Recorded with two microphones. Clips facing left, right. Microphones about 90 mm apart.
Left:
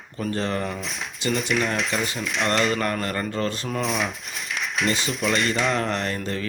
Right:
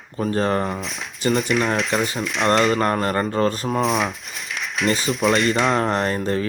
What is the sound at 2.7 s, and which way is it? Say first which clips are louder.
Speech: right 5 dB; 35° right (ahead or behind).